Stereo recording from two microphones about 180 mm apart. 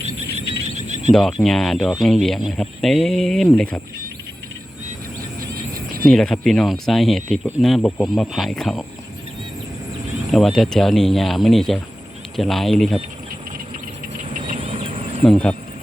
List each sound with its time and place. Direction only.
0.8 s a sound: 40° right (ahead or behind)
1.1 s speech: centre (ahead or behind)
6.0 s speech: 5° left (ahead or behind)
10.3 s speech: centre (ahead or behind)
14.3 s a sound: 45° right (ahead or behind)
14.6 s fowl: 30° right (ahead or behind)
15.2 s speech: 5° left (ahead or behind)